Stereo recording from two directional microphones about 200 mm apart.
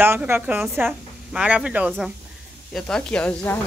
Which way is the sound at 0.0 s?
10° right (ahead or behind).